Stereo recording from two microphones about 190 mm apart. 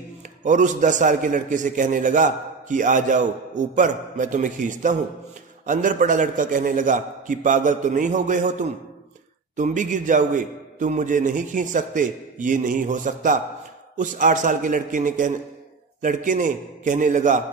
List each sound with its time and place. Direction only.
0.4 s a man's voice: 40° right (ahead or behind)